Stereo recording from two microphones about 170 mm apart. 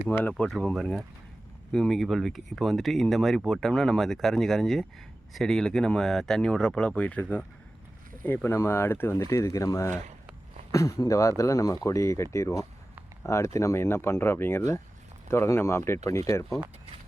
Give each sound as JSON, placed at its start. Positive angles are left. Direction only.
{"t": 0.1, "sound": "speech", "side_deg": 10}